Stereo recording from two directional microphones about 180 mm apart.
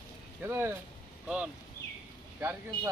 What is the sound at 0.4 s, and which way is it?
Speech, 15° right (ahead or behind).